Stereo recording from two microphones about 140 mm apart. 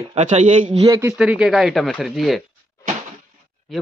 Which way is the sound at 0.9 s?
25° right (ahead or behind).